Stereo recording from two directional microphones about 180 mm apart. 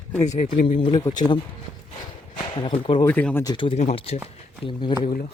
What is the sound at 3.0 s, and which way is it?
Speech, 10° left (ahead or behind).